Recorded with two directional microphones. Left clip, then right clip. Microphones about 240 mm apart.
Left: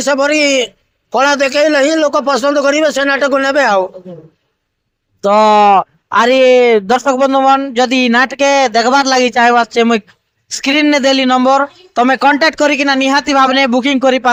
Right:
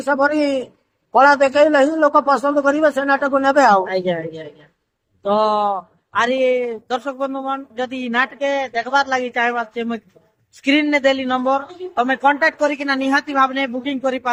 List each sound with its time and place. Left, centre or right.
0.0 s speech: left
5.2 s speech: left